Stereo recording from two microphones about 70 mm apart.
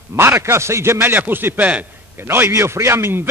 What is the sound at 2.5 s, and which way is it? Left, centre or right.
Speech, right.